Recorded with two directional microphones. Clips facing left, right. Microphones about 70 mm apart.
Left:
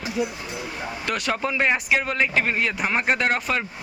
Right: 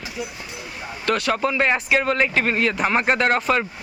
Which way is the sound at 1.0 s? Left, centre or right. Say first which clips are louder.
Right 5 dB; centre.